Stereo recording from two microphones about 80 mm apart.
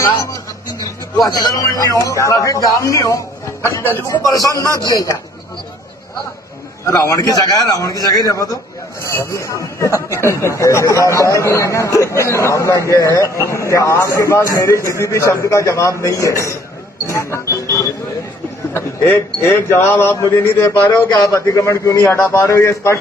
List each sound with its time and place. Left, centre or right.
1.6 s a man's voice: left
3.6 s a man's voice: left
4.1 s a man's voice: left
4.5 s speech: right
6.8 s a man's voice: left
9.0 s a man's voice: left
18.7 s a man's voice: left